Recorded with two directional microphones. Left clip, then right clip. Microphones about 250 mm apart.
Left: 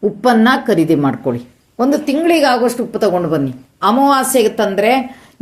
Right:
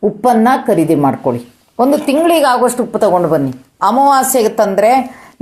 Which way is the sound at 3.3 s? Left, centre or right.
Centre.